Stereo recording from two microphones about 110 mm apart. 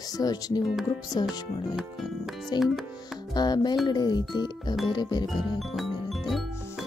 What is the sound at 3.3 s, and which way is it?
Speech, 40° left (ahead or behind).